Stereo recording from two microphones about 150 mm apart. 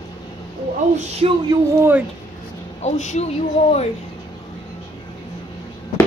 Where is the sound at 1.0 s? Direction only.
45° right (ahead or behind).